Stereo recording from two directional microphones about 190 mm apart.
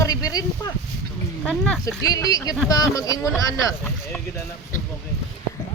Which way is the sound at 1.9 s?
20° left (ahead or behind).